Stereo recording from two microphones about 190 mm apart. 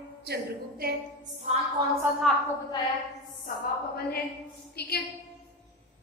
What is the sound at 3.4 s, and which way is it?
A woman's voice, 55° left (ahead or behind).